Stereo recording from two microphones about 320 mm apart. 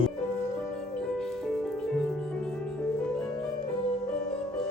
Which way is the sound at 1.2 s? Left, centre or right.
Centre.